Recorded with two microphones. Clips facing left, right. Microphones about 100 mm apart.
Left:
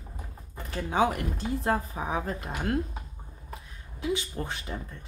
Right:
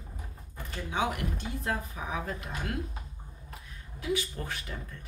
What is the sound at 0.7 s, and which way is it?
Speech, 40° left (ahead or behind).